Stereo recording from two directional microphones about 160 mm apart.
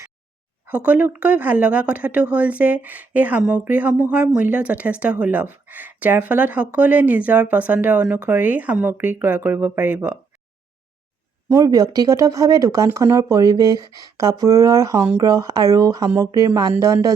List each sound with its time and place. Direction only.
0.7 s speech: 10° right (ahead or behind)
11.4 s speech: 20° right (ahead or behind)